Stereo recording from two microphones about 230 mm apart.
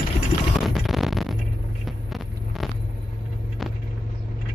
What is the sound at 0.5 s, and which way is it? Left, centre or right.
Music, centre.